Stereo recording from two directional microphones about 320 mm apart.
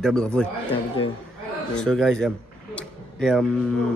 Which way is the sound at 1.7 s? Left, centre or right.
Centre.